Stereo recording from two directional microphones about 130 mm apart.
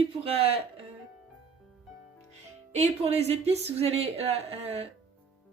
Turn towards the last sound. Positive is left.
turn(degrees=-50)  # may be behind; listen again after turning